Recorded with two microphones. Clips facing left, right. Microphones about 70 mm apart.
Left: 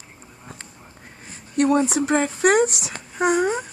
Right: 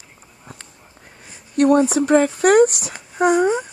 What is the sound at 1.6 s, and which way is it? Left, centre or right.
Speech, right.